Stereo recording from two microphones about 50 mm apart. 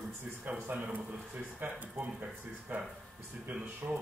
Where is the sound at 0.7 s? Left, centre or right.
Right.